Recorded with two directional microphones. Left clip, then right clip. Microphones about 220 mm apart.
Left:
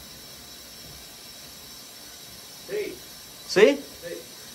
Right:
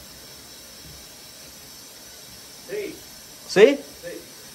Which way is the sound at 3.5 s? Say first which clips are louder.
Right 3 dB; 10° left (ahead or behind).